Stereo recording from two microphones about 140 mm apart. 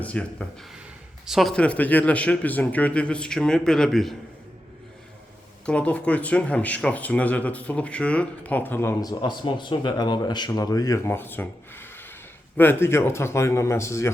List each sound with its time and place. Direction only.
0.0 s speech: 10° left (ahead or behind)
5.6 s a man's voice: 10° left (ahead or behind)